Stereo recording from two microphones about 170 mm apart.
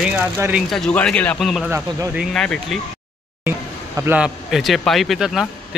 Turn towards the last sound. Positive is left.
turn(degrees=0)  # may be behind; listen again after turning